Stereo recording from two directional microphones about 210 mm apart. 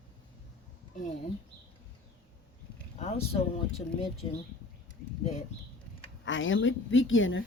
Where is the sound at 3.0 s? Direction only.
30° left (ahead or behind).